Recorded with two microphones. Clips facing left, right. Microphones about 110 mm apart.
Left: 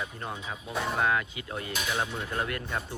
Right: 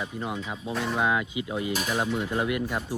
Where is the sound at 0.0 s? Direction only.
10° right (ahead or behind).